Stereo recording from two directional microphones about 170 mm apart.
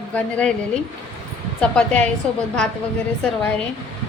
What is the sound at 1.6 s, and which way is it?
Speech, 5° left (ahead or behind).